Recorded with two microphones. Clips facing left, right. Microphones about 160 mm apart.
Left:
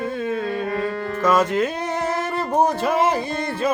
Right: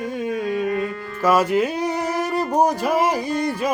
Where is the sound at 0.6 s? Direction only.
35° left (ahead or behind).